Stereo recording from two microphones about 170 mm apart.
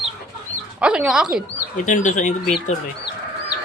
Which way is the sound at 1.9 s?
45° left (ahead or behind).